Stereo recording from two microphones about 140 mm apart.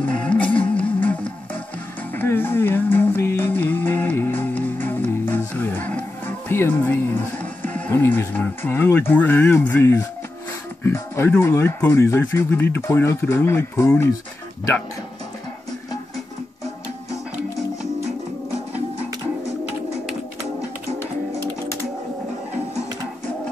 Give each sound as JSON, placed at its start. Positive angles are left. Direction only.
{"t": 0.2, "sound": "music", "side_deg": 10}
{"t": 2.1, "sound": "music", "side_deg": 15}
{"t": 7.6, "sound": "speech", "side_deg": 10}